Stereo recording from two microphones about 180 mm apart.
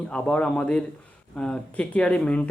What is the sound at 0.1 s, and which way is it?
Speech, 5° left (ahead or behind).